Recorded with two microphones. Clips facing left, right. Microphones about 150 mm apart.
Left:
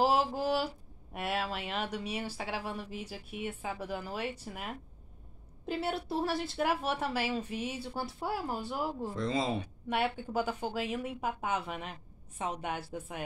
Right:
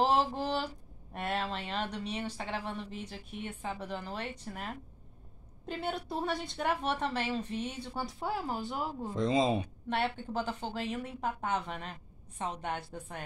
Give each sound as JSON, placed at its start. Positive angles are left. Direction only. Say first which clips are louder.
{"t": 0.0, "sound": "a sound", "louder": "even", "side_deg": 5}
{"t": 1.1, "sound": "speech", "louder": "even", "side_deg": 5}
{"t": 9.1, "sound": "speech", "louder": "right 6 dB", "side_deg": -20}
{"t": 9.8, "sound": "speech", "louder": "left 2 dB", "side_deg": 10}